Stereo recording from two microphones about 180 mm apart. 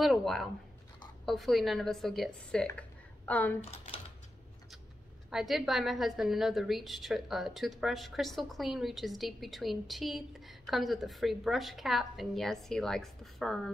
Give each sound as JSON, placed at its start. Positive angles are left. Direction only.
{"t": 0.0, "sound": "a woman's voice", "side_deg": 0}
{"t": 3.7, "sound": "typewriter", "side_deg": 35}
{"t": 5.3, "sound": "a woman's voice", "side_deg": 0}